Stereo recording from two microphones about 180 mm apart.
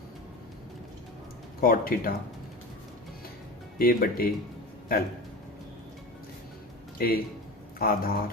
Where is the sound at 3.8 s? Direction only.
55° left (ahead or behind).